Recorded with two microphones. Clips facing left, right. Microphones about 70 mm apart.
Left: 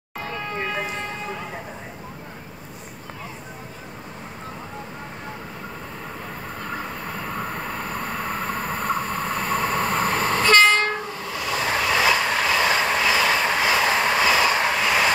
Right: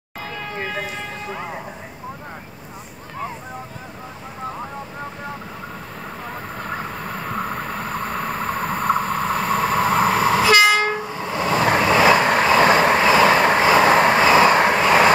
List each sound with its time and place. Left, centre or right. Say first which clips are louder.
0.6 s vehicle: right 1 dB; centre
7.2 s vehicle: right 4 dB; centre
11.1 s vehicle: right 6 dB; right